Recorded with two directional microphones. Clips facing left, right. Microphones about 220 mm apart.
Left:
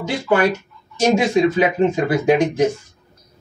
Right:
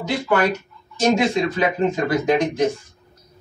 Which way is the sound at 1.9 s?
10° left (ahead or behind).